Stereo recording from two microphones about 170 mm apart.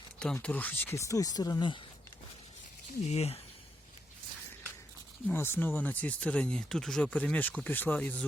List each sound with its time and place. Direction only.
0.2 s speech: 5° left (ahead or behind); by 1.8 s 25° left (ahead or behind)
3.1 s speech: 40° left (ahead or behind)
5.3 s speech: 10° left (ahead or behind)